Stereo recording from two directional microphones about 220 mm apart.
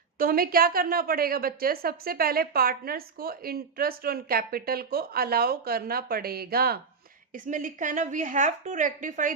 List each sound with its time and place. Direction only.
0.2 s a woman's voice: 40° right (ahead or behind)